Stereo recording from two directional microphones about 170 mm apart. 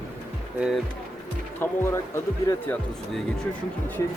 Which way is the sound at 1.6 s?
15° left (ahead or behind).